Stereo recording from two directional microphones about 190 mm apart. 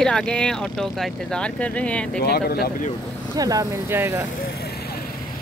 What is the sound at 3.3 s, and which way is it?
Speech, 20° right (ahead or behind).